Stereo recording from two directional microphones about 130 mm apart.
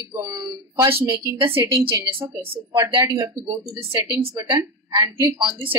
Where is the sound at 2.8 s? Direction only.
30° right (ahead or behind).